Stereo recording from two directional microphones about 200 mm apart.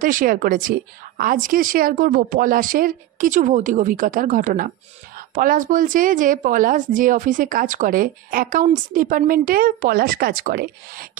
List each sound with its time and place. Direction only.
0.0 s a woman's voice: 45° right (ahead or behind)